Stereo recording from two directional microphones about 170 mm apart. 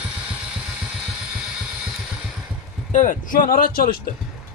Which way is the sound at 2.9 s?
50° left (ahead or behind).